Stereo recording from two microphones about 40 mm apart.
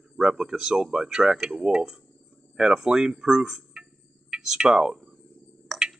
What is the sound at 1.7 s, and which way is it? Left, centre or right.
Cricket, centre.